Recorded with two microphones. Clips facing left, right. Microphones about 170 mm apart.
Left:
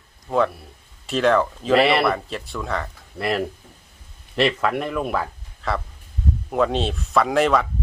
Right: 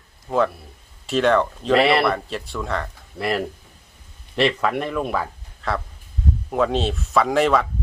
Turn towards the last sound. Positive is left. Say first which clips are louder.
# even
turn(degrees=0)  # may be behind; listen again after turning